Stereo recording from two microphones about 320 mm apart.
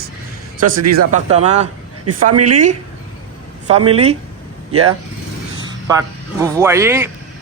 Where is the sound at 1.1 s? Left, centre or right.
Centre.